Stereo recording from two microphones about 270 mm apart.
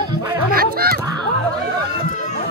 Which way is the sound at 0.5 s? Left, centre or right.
Right.